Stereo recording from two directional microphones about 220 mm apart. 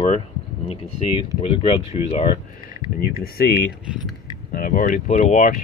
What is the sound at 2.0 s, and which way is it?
Speech, 25° left (ahead or behind).